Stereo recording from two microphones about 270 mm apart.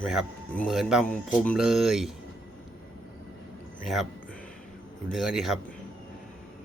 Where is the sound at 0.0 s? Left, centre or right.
Centre.